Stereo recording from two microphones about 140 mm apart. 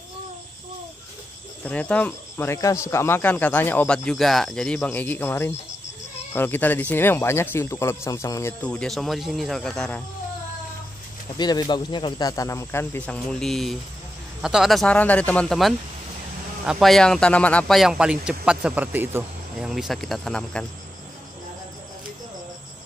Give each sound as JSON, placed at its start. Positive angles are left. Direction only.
{"t": 1.6, "sound": "speech", "side_deg": 10}
{"t": 8.6, "sound": "speech", "side_deg": 5}
{"t": 11.3, "sound": "speech", "side_deg": 30}
{"t": 19.6, "sound": "speech", "side_deg": 0}